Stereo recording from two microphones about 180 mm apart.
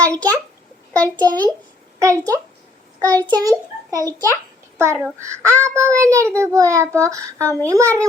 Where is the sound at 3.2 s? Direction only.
20° right (ahead or behind).